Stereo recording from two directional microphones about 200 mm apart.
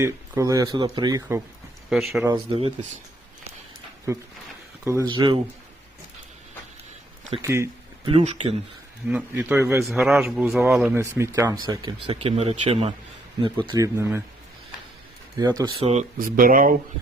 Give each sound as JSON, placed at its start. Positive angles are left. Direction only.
{"t": 0.0, "sound": "speech", "side_deg": -15}
{"t": 1.9, "sound": "a man's voice", "side_deg": 0}
{"t": 2.2, "sound": "speech", "side_deg": -20}
{"t": 4.9, "sound": "speech", "side_deg": -15}
{"t": 7.4, "sound": "speech", "side_deg": -15}
{"t": 8.0, "sound": "speech", "side_deg": -30}
{"t": 9.0, "sound": "a man's voice", "side_deg": -10}
{"t": 15.4, "sound": "speech", "side_deg": -20}
{"t": 15.9, "sound": "speech", "side_deg": -40}